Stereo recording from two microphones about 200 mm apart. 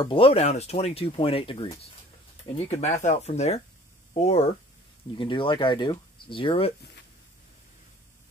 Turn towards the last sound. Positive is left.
turn(degrees=25)  # may be behind; listen again after turning